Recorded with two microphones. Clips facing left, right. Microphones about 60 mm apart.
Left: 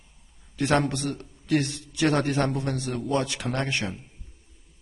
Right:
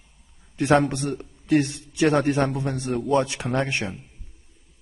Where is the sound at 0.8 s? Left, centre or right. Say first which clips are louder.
Right 2 dB; right.